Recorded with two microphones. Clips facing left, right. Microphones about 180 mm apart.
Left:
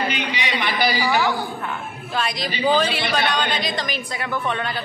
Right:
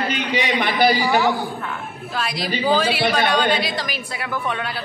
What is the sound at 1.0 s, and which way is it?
Speech, 20° right (ahead or behind).